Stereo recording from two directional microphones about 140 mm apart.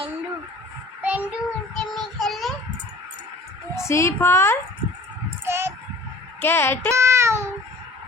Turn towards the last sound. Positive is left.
turn(degrees=-20)  # may be behind; listen again after turning